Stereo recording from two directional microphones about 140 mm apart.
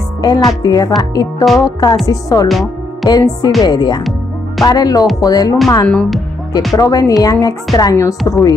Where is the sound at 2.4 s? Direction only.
Centre (ahead or behind).